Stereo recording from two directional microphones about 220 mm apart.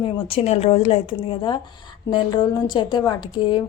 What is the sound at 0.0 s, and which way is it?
A woman's voice, 25° left (ahead or behind).